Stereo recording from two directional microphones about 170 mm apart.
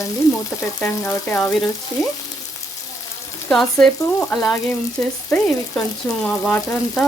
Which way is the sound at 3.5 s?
5° left (ahead or behind).